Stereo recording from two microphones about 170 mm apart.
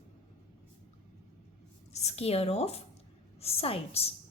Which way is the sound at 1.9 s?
40° left (ahead or behind).